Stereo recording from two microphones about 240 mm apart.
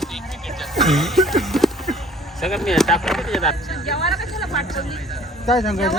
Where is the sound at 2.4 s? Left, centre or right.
Centre.